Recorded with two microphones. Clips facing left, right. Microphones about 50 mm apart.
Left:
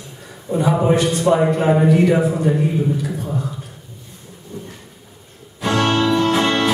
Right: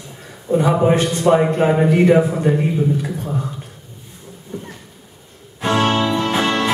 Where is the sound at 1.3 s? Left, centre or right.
Right.